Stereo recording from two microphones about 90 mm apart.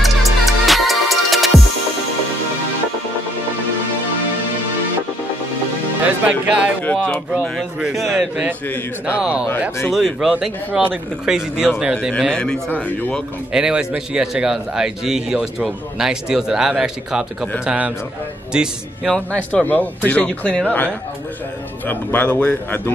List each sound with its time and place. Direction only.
0.0 s music: centre (ahead or behind)
6.2 s a man's voice: 15° right (ahead or behind)
6.8 s speech: 15° left (ahead or behind)
7.8 s a man's voice: 5° right (ahead or behind)
12.3 s speech: 10° left (ahead or behind)
13.5 s a man's voice: 10° right (ahead or behind)
19.1 s speech: 15° left (ahead or behind)